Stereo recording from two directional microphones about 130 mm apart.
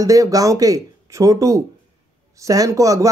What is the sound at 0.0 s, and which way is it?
Speech, 25° right (ahead or behind).